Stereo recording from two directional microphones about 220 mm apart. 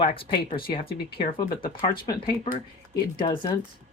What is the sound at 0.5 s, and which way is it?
Speech, 40° left (ahead or behind).